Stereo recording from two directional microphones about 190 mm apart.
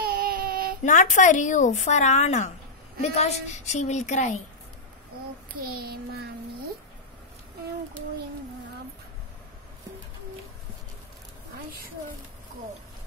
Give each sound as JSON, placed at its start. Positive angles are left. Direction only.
{"t": 0.0, "sound": "child singing", "side_deg": -50}
{"t": 0.8, "sound": "speech", "side_deg": 40}
{"t": 5.6, "sound": "child singing", "side_deg": -55}